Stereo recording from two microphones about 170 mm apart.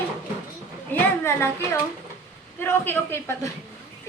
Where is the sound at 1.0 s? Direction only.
15° left (ahead or behind).